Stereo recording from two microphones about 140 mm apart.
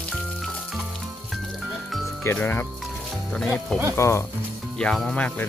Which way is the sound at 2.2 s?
15° left (ahead or behind).